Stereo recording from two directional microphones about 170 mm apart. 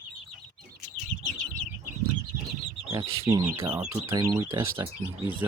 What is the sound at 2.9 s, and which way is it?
Speech, 20° right (ahead or behind).